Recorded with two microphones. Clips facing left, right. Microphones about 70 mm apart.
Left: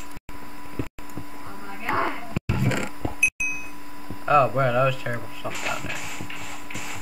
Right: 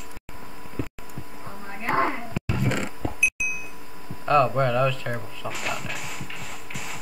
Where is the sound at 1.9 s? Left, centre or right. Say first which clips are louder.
Right 2 dB; right.